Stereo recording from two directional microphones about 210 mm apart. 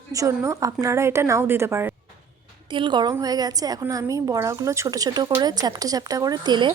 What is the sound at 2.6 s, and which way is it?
A woman's voice, 20° right (ahead or behind).